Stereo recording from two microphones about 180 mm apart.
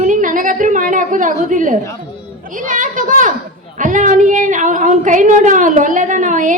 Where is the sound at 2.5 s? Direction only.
45° right (ahead or behind).